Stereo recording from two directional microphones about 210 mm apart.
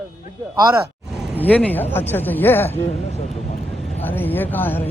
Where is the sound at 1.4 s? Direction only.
5° left (ahead or behind).